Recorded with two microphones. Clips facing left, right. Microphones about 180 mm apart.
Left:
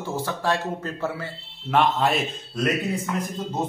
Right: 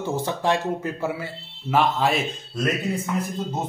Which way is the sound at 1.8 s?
Centre (ahead or behind).